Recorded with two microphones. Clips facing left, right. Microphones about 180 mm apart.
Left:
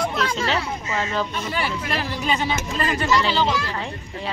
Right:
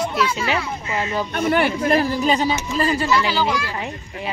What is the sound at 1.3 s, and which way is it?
Speech, 55° right (ahead or behind).